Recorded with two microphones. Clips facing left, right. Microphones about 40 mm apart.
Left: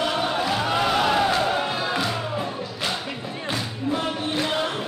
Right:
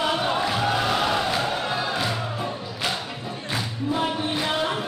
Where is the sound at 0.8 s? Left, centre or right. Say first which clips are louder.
Left 3 dB; centre.